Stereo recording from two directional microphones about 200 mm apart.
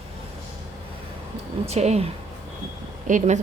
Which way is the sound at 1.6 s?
30° right (ahead or behind).